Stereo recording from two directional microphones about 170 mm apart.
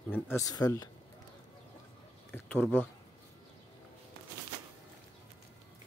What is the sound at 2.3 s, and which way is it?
Speech, 10° left (ahead or behind).